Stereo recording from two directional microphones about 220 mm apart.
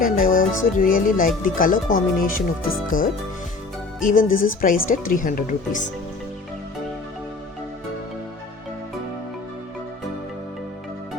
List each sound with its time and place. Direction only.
0.0 s speech: 40° left (ahead or behind)